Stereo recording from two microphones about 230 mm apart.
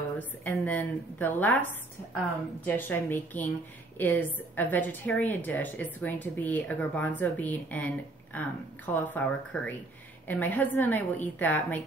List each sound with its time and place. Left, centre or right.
0.2 s a woman's voice: centre